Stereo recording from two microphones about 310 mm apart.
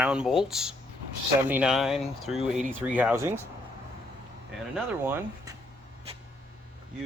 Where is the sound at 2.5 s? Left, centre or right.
Right.